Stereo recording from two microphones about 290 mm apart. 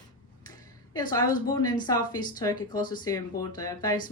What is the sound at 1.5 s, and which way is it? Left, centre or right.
Speech, centre.